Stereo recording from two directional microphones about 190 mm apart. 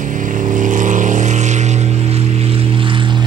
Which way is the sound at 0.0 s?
40° right (ahead or behind).